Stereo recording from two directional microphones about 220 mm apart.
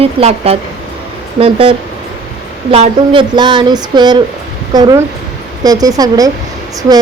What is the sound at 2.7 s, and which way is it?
Speech, 25° right (ahead or behind).